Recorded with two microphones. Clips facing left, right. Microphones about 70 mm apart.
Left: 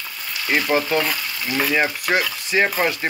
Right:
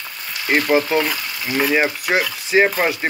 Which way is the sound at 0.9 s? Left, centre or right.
Centre.